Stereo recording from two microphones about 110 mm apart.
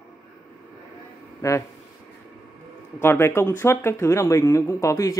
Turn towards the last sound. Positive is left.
turn(degrees=30)  # may be behind; listen again after turning